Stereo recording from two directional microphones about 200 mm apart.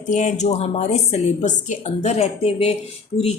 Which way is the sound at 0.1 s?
35° left (ahead or behind).